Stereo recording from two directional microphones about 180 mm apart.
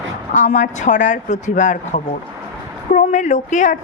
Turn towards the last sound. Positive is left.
turn(degrees=45)  # may be behind; listen again after turning